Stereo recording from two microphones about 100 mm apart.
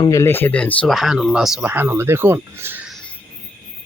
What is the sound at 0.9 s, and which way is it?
Speech, centre (ahead or behind).